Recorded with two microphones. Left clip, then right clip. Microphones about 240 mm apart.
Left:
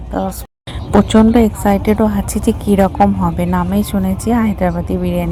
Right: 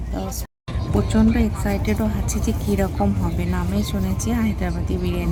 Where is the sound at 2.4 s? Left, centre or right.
Left.